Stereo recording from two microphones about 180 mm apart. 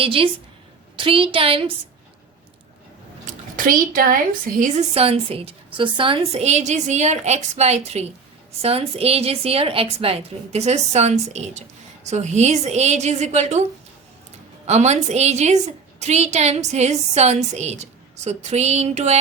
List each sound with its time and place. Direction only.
0.0 s a woman's voice: 30° right (ahead or behind)
3.2 s speech: 50° right (ahead or behind)
4.9 s a woman's voice: 35° right (ahead or behind)
14.7 s a woman's voice: 40° right (ahead or behind)